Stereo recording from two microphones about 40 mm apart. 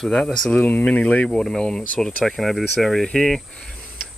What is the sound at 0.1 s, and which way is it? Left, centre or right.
Speech, centre.